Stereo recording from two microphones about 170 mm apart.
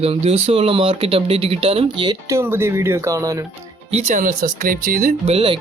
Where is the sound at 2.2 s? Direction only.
15° right (ahead or behind).